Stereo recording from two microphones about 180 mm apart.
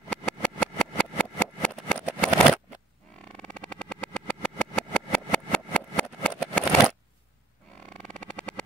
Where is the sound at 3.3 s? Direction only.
5° left (ahead or behind).